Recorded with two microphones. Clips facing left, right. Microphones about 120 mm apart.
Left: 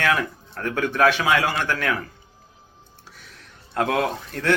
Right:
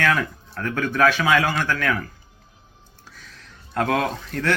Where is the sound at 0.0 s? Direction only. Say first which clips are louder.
Right 1 dB; 25° left (ahead or behind).